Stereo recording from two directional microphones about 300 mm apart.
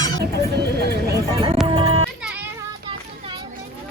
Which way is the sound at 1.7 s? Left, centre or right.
Centre.